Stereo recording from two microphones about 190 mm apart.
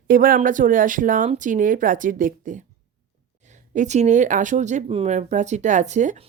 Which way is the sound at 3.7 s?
35° right (ahead or behind).